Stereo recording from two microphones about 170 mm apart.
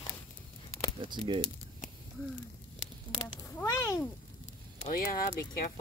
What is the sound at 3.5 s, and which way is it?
Speech, 15° left (ahead or behind).